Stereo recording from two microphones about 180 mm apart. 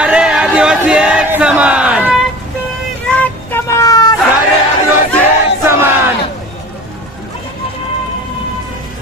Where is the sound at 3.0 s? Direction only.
10° left (ahead or behind).